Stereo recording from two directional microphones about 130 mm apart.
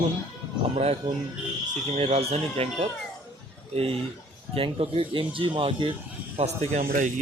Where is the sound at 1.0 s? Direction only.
35° right (ahead or behind).